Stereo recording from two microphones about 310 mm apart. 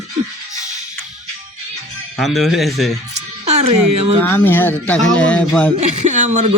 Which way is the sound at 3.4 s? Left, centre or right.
Centre.